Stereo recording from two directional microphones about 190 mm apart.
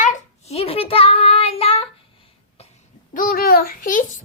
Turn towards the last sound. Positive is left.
turn(degrees=45)  # may be behind; listen again after turning